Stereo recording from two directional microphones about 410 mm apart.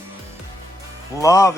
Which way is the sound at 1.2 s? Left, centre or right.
Centre.